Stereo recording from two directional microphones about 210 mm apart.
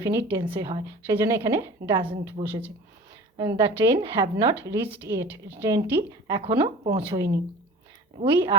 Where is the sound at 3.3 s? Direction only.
25° right (ahead or behind).